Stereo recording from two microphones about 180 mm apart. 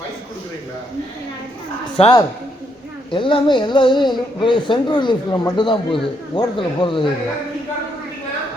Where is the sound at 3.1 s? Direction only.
30° left (ahead or behind).